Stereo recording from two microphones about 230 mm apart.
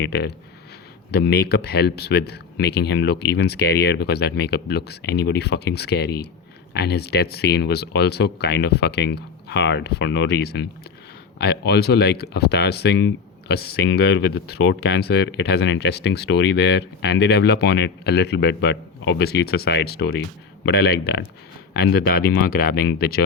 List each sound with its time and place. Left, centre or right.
0.0 s speech: left